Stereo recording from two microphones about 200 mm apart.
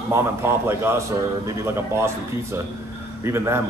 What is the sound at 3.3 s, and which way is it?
Speech, 10° right (ahead or behind).